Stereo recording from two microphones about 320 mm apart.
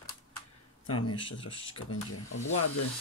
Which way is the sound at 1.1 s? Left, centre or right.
Centre.